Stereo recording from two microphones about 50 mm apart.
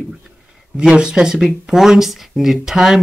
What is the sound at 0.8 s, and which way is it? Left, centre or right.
Speech, centre.